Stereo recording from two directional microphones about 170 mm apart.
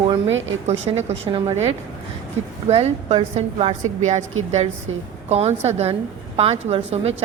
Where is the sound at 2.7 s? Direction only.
35° right (ahead or behind).